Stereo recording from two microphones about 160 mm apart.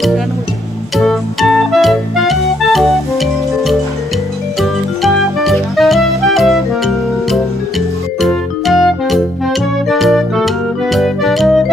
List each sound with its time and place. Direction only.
0.9 s music: centre (ahead or behind)